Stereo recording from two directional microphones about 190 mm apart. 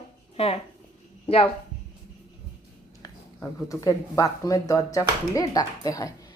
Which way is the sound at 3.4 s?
15° left (ahead or behind).